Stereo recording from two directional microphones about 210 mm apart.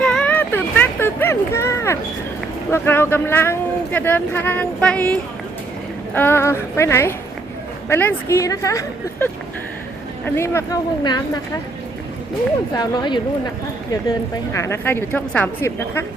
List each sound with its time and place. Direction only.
0.0 s a sound: 5° left (ahead or behind)
2.7 s speech: 10° left (ahead or behind)
12.7 s speech: 20° left (ahead or behind)